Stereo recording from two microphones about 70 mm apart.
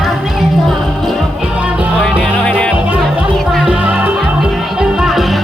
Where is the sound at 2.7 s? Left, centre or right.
Centre.